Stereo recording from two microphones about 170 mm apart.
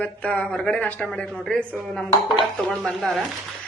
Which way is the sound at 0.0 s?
10° left (ahead or behind).